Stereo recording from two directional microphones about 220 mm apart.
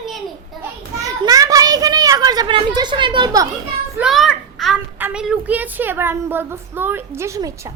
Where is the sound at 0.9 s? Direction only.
15° right (ahead or behind).